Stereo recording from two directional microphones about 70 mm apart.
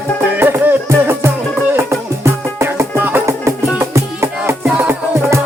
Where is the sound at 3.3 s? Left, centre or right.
Right.